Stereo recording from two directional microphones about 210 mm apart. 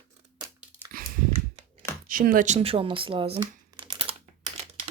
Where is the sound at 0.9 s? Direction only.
40° right (ahead or behind).